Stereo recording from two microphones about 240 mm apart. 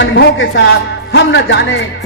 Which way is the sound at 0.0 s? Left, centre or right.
Left.